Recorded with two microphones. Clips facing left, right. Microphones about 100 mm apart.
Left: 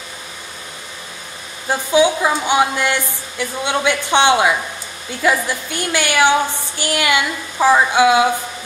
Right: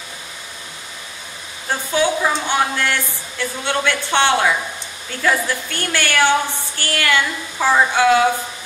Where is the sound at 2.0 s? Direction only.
15° left (ahead or behind).